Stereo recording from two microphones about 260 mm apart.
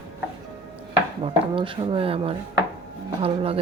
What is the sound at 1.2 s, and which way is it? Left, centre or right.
Speech, centre.